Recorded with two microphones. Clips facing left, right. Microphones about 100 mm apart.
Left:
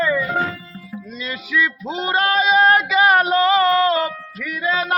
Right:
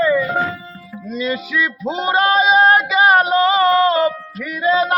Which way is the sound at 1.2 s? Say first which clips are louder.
Right 2 dB; 20° right (ahead or behind).